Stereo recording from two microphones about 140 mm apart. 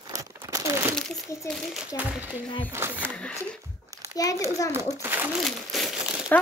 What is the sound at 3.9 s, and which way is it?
Crumpling, 25° right (ahead or behind).